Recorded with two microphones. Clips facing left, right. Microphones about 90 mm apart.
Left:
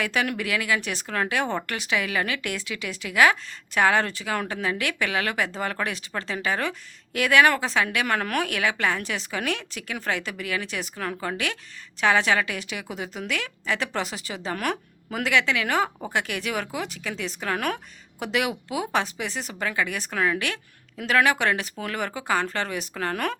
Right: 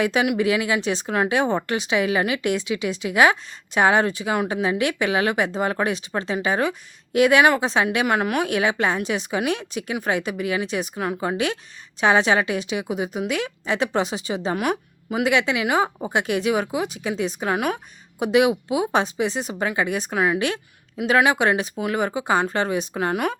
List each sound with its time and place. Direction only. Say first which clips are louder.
0.0 s speech: right 6 dB; 20° right (ahead or behind)